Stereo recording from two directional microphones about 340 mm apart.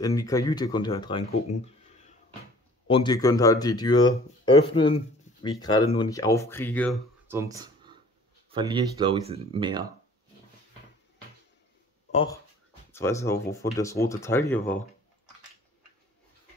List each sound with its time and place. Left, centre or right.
0.0 s speech: centre
2.9 s speech: centre
7.2 s a sound: centre
8.5 s speech: centre
12.1 s speech: centre